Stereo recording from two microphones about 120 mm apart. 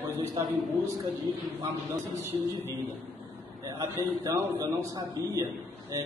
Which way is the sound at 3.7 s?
30° right (ahead or behind).